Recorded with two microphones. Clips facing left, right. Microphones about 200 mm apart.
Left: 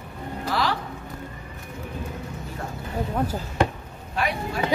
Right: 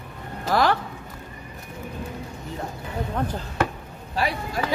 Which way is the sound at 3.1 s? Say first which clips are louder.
Left 1 dB; 10° left (ahead or behind).